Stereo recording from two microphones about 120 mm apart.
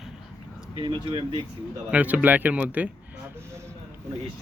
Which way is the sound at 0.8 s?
45° right (ahead or behind).